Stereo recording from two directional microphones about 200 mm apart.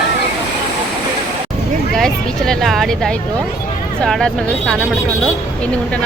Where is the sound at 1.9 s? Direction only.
Centre (ahead or behind).